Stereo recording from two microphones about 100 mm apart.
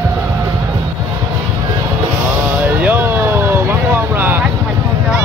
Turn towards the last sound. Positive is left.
turn(degrees=-20)  # may be behind; listen again after turning